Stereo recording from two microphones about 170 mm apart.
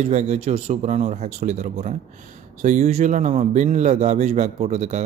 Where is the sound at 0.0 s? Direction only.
45° right (ahead or behind).